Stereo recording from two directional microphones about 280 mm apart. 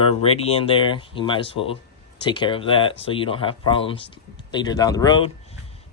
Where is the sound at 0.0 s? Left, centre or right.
Left.